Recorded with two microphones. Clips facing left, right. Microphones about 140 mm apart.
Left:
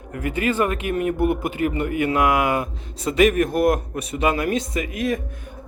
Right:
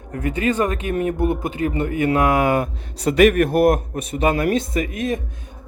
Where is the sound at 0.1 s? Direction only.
30° right (ahead or behind).